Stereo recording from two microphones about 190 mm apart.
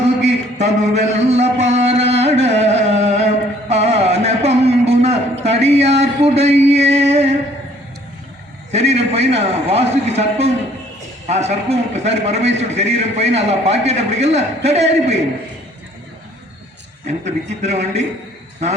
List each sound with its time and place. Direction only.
0.0 s a sound: 35° right (ahead or behind)
8.7 s a man's voice: 35° right (ahead or behind)
17.1 s a man's voice: 35° right (ahead or behind)